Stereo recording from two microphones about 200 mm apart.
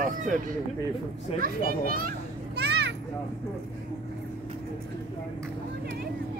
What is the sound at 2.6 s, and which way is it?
Children playing, 60° right (ahead or behind).